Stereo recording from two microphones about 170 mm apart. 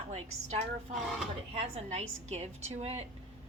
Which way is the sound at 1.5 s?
40° right (ahead or behind).